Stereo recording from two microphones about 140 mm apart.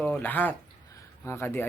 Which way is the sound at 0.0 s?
10° left (ahead or behind).